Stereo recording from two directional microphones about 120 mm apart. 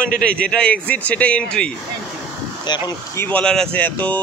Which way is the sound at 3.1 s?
10° left (ahead or behind).